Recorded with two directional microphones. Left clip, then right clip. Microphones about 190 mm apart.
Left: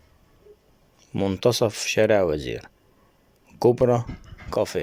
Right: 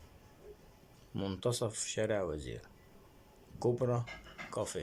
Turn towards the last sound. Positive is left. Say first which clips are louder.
# left 14 dB
turn(degrees=45)  # may be behind; listen again after turning